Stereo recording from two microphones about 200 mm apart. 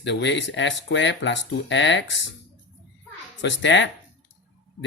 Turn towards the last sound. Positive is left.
turn(degrees=65)  # may be behind; listen again after turning